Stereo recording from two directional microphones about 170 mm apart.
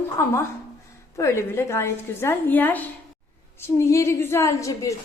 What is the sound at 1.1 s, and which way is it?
A woman's voice, 15° left (ahead or behind).